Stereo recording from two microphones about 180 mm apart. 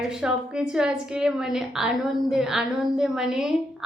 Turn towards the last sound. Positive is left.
turn(degrees=-5)  # may be behind; listen again after turning